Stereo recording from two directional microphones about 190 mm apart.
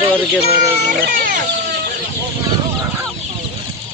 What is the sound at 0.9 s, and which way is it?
Music, 50° right (ahead or behind).